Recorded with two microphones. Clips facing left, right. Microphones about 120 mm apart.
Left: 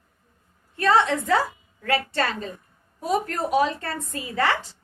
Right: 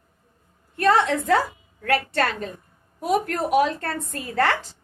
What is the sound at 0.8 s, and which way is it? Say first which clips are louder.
A woman's voice: right 1 dB; 55° right (ahead or behind).